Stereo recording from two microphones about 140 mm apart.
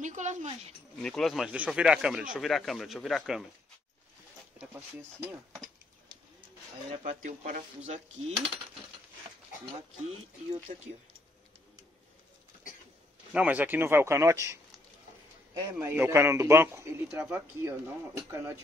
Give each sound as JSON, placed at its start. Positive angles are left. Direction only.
{"t": 0.0, "sound": "a sound", "side_deg": -60}
{"t": 0.9, "sound": "speech", "side_deg": 5}
{"t": 7.0, "sound": "speech", "side_deg": -65}
{"t": 10.0, "sound": "speech", "side_deg": -50}
{"t": 13.3, "sound": "a man's voice", "side_deg": -10}